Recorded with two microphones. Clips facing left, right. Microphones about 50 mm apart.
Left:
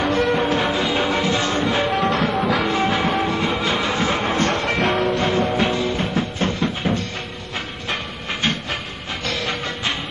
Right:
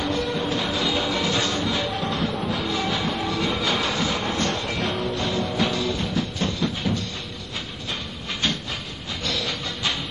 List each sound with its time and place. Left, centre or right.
0.0 s music: left
1.9 s music: left
2.7 s music: left
5.7 s music: left
8.3 s train: left
9.2 s music: left